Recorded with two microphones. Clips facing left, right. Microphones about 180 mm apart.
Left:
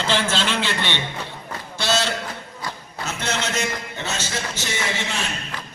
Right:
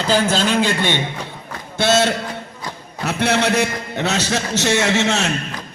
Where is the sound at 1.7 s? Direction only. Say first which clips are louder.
Right 7 dB; 55° right (ahead or behind).